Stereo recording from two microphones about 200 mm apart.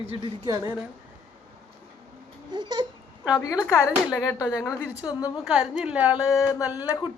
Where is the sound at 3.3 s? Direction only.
20° left (ahead or behind).